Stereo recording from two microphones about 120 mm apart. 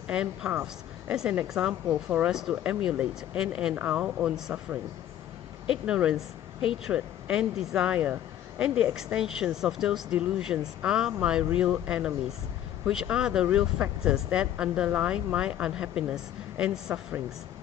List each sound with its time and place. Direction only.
0.1 s a woman's voice: 10° right (ahead or behind)